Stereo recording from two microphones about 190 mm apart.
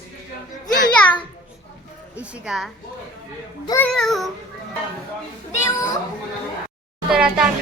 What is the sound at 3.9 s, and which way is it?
Speech, centre (ahead or behind).